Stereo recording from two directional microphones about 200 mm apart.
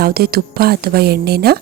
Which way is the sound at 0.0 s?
50° right (ahead or behind).